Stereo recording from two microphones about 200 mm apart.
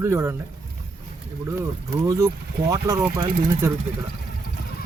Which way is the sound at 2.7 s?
15° right (ahead or behind).